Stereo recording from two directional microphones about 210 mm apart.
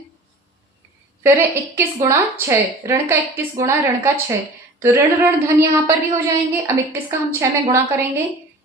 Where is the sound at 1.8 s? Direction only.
15° right (ahead or behind).